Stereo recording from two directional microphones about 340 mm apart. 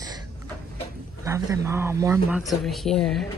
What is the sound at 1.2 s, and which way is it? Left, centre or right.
A man's voice, centre.